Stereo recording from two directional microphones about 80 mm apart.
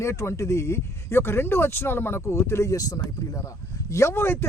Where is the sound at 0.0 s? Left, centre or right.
Left.